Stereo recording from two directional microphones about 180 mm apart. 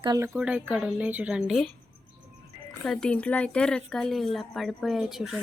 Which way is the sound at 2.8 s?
5° left (ahead or behind).